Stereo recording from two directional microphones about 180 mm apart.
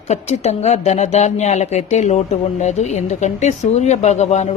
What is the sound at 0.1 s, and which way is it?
Speech, 40° left (ahead or behind).